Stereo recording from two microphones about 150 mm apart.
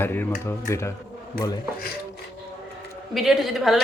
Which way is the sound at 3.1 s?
Centre (ahead or behind).